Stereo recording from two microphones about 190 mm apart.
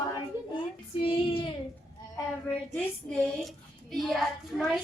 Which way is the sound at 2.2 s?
15° left (ahead or behind).